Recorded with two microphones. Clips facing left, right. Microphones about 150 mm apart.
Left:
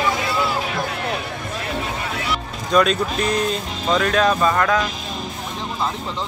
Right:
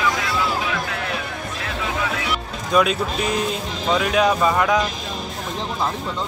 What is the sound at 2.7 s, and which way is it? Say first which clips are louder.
Speech: left 1 dB; 5° right (ahead or behind).